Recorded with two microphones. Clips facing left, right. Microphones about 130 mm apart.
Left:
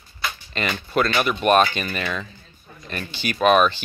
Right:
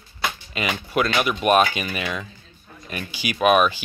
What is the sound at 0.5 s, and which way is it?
Speech, 10° right (ahead or behind).